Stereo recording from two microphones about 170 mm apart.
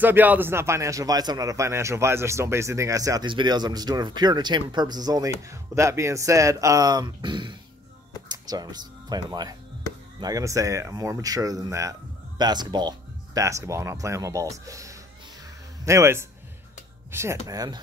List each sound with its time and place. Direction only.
0.0 s a man's voice: 10° right (ahead or behind)